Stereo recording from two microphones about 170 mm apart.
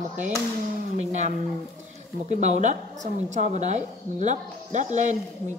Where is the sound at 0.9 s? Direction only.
45° right (ahead or behind).